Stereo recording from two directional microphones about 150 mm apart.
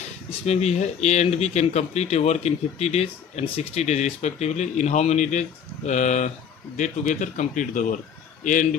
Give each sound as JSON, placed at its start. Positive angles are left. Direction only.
{"t": 0.4, "sound": "speech", "side_deg": 45}